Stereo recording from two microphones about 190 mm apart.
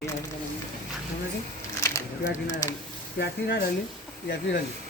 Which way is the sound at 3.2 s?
65° left (ahead or behind).